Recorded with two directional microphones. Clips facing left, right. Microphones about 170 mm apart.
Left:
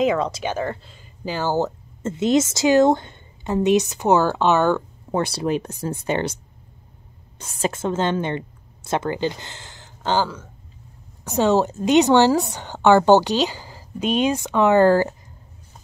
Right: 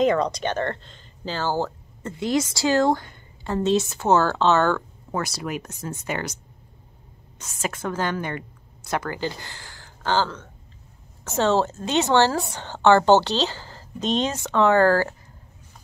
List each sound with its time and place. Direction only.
0.0 s speech: 5° left (ahead or behind)
5.1 s a woman's voice: 30° left (ahead or behind)